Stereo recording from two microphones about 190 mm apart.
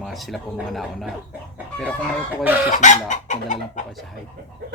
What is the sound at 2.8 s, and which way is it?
Chicken, 40° left (ahead or behind).